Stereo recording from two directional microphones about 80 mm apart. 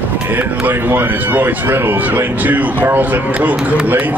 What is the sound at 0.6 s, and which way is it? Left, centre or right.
A man's voice, right.